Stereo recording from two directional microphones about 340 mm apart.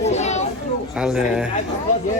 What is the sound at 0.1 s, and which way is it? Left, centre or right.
Children playing, centre.